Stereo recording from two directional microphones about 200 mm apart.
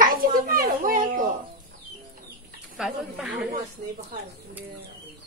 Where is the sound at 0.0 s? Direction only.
45° right (ahead or behind).